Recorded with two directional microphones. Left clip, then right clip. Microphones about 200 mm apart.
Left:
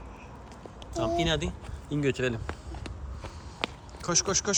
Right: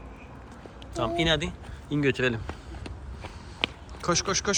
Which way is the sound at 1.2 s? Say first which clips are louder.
Right 3 dB; 15° left (ahead or behind).